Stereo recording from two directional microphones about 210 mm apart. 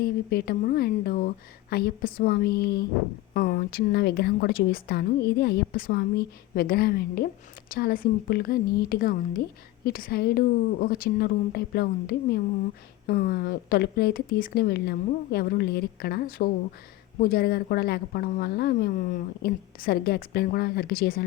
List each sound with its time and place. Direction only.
0.0 s a woman's voice: 50° left (ahead or behind)